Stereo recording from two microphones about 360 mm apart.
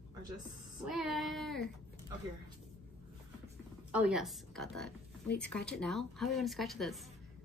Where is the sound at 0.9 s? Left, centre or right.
Centre.